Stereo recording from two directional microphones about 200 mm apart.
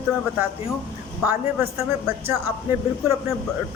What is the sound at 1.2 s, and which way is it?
Speech, 10° right (ahead or behind).